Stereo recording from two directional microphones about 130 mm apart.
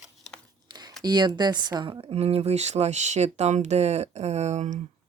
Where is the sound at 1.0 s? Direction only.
35° right (ahead or behind); by 4.8 s 65° right (ahead or behind).